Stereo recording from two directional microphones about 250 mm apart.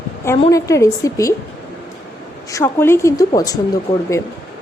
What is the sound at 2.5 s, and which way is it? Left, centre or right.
A woman's voice, centre.